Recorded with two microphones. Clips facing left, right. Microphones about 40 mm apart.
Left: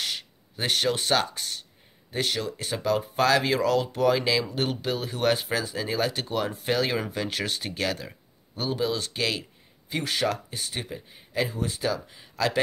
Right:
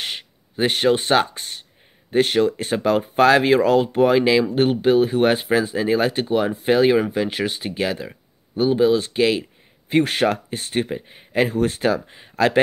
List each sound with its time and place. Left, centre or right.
0.0 s speech: right
9.8 s speech: right